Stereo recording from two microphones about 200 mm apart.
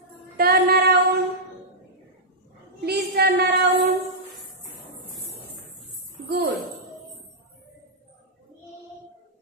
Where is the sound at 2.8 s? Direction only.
55° right (ahead or behind).